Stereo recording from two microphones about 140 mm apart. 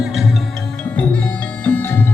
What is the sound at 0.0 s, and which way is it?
Music, centre (ahead or behind).